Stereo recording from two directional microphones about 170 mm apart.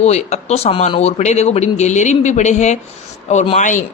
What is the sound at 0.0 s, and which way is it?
A man's voice, 40° left (ahead or behind).